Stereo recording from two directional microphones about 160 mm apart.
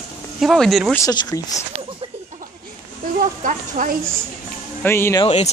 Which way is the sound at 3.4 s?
55° right (ahead or behind).